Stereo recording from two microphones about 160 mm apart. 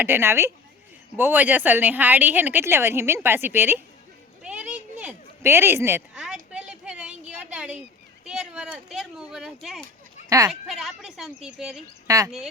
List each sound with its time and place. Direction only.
0.0 s a woman's voice: 15° right (ahead or behind)
4.4 s a sound: 10° right (ahead or behind)
6.1 s a sound: 5° right (ahead or behind)
8.2 s speech: 5° right (ahead or behind)
10.2 s speech: 20° right (ahead or behind)
10.5 s a woman's voice: centre (ahead or behind)
12.0 s speech: 20° right (ahead or behind)